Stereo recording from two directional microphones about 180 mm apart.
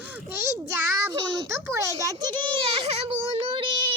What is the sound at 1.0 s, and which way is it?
Child singing, 25° right (ahead or behind).